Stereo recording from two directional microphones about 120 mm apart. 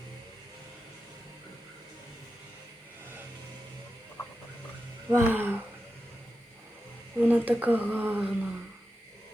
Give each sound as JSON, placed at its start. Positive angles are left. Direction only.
{"t": 5.1, "sound": "speech", "side_deg": -15}
{"t": 7.2, "sound": "speech", "side_deg": -15}